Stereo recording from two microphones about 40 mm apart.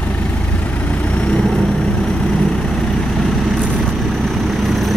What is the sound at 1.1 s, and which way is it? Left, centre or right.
Vehicle, left.